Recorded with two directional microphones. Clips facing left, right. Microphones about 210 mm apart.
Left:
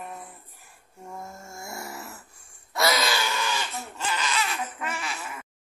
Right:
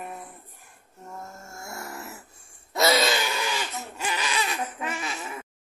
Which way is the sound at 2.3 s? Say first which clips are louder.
Right 2 dB; 25° right (ahead or behind).